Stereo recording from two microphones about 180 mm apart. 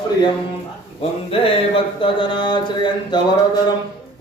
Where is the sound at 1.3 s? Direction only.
30° left (ahead or behind).